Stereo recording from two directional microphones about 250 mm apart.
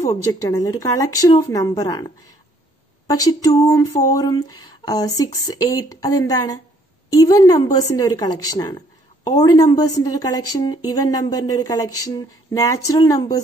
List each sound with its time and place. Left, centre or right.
0.1 s speech: centre